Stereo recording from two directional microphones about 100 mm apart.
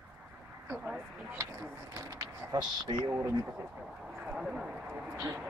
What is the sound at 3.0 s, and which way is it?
Speech, 25° right (ahead or behind).